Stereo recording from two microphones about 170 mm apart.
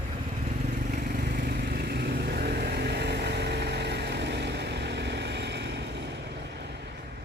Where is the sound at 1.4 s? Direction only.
70° right (ahead or behind); by 5.8 s 90° right.